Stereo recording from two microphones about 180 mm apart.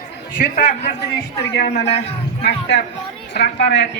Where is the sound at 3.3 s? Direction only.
75° left (ahead or behind).